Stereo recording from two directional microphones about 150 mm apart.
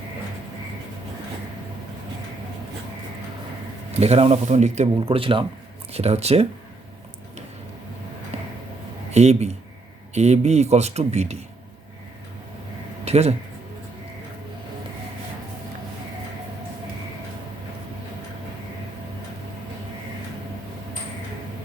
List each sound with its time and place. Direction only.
4.0 s speech: 45° right (ahead or behind)
8.3 s a sound: 45° right (ahead or behind)
9.1 s speech: 45° right (ahead or behind)
13.1 s speech: 45° right (ahead or behind)